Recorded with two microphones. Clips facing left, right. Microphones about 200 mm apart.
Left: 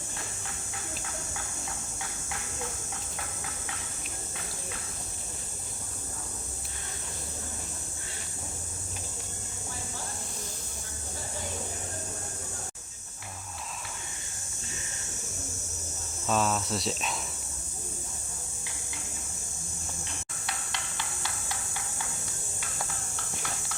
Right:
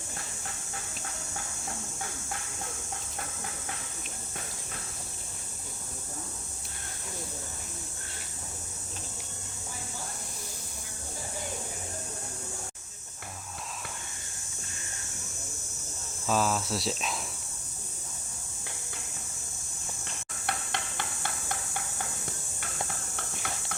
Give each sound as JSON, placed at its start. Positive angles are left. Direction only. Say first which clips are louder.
{"t": 16.2, "sound": "speech", "louder": "even", "side_deg": 0}
{"t": 20.5, "sound": "hammer", "louder": "right 5 dB", "side_deg": -55}
{"t": 23.1, "sound": "a sound", "louder": "right 1 dB", "side_deg": -55}